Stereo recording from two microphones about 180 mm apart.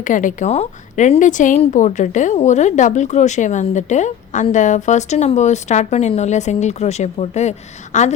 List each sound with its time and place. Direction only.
0.0 s a woman's voice: 45° left (ahead or behind)